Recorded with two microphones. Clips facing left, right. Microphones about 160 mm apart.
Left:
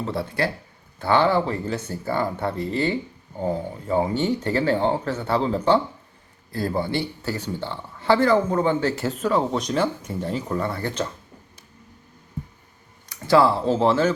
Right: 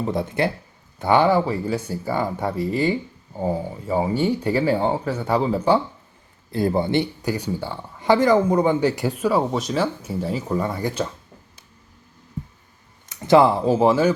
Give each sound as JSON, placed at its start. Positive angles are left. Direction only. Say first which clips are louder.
{"t": 0.0, "sound": "speech", "louder": "right 3 dB", "side_deg": -20}
{"t": 6.5, "sound": "speech", "louder": "right 4 dB", "side_deg": -20}
{"t": 13.1, "sound": "speech", "louder": "right 3 dB", "side_deg": -20}